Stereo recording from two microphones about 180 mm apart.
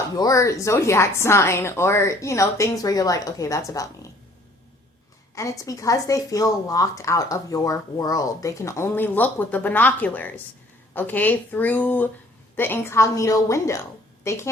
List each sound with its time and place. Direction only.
0.2 s speech: 20° left (ahead or behind)
5.3 s speech: 15° left (ahead or behind)